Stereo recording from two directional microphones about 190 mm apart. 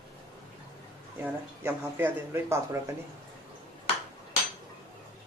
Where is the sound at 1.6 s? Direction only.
10° right (ahead or behind).